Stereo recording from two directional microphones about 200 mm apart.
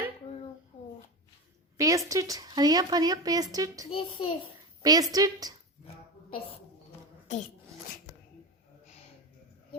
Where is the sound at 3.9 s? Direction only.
25° left (ahead or behind).